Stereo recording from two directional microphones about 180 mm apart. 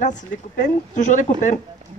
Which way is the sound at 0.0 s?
45° left (ahead or behind).